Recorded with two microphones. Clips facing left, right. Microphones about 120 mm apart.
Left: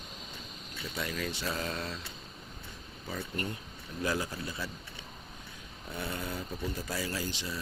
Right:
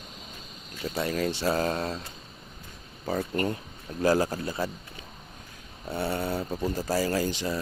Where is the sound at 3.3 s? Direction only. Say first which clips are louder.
Right 7 dB; 90° right.